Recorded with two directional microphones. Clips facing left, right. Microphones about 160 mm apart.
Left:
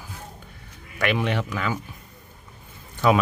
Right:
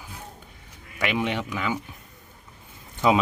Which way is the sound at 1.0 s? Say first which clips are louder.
Left 2 dB; 15° right (ahead or behind).